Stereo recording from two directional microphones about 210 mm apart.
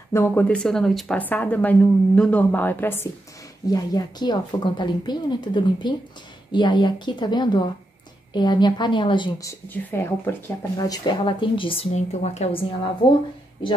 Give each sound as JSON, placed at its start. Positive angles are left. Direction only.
{"t": 0.1, "sound": "a woman's voice", "side_deg": 10}